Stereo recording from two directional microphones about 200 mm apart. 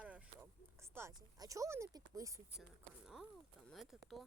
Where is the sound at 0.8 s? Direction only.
15° right (ahead or behind).